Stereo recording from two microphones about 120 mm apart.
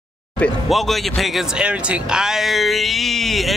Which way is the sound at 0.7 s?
Centre (ahead or behind).